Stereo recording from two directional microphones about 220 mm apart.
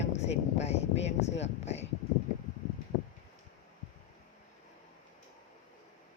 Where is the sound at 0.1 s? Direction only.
30° left (ahead or behind).